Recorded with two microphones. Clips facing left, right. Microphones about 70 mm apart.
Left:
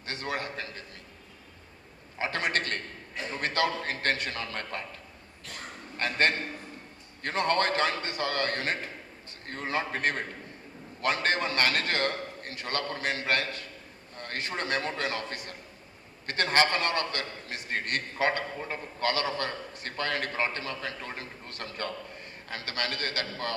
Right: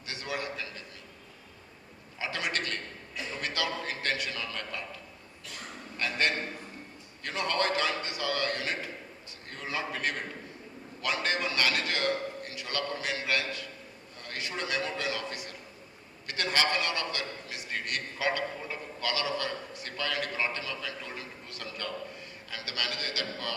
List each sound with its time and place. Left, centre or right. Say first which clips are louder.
0.0 s a sound: left 2 dB; left
2.1 s a man's voice: left 4 dB; left
6.0 s a man's voice: left 3 dB; left